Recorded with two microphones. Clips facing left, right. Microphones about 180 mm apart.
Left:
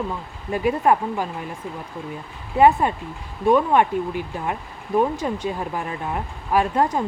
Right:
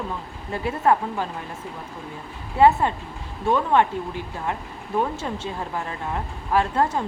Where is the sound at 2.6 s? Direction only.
15° left (ahead or behind).